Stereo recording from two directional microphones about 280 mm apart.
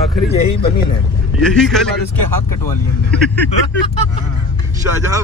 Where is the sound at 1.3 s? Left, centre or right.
Centre.